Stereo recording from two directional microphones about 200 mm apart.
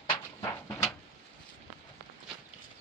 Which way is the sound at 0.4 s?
15° left (ahead or behind).